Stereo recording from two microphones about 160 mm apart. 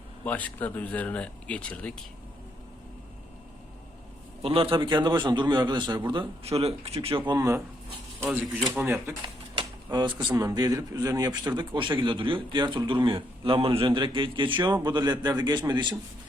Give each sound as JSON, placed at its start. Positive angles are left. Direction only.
{"t": 0.3, "sound": "speech", "side_deg": 10}
{"t": 4.4, "sound": "speech", "side_deg": -35}
{"t": 6.4, "sound": "speech", "side_deg": -40}
{"t": 7.3, "sound": "speech", "side_deg": -20}
{"t": 8.2, "sound": "speech", "side_deg": -5}
{"t": 9.2, "sound": "speech", "side_deg": -30}